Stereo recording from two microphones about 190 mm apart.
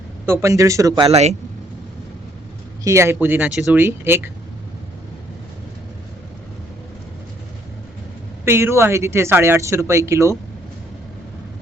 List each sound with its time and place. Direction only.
0.3 s speech: 15° right (ahead or behind)
1.0 s speech: 35° right (ahead or behind)
2.8 s speech: 15° right (ahead or behind)
8.4 s speech: 15° right (ahead or behind)